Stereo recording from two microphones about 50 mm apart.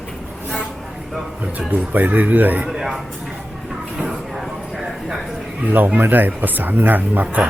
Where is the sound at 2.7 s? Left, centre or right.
Centre.